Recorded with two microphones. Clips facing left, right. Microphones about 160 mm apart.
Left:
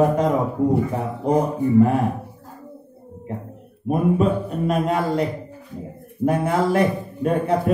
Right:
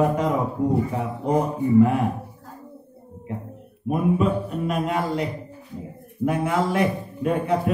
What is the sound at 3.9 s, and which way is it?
Speech, 40° left (ahead or behind).